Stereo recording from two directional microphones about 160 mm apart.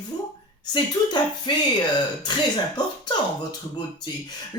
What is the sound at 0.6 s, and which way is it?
Speech, 25° left (ahead or behind).